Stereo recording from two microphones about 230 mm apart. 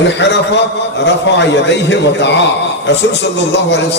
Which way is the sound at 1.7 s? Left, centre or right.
Left.